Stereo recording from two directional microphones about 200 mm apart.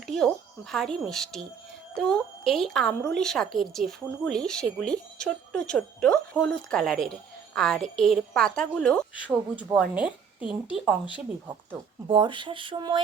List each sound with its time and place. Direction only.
0.7 s speech: centre (ahead or behind)
9.3 s speech: 20° right (ahead or behind)
9.7 s a woman's voice: 5° right (ahead or behind)
11.4 s speech: 25° right (ahead or behind)